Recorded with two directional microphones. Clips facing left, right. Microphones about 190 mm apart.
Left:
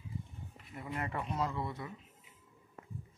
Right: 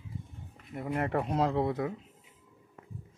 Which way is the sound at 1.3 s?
90° right.